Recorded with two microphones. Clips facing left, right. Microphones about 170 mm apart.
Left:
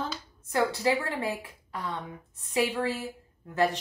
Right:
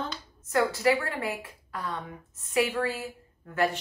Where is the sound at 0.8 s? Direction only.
20° left (ahead or behind).